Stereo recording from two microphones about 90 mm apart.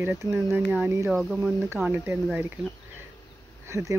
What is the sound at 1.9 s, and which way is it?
Speech, 25° right (ahead or behind).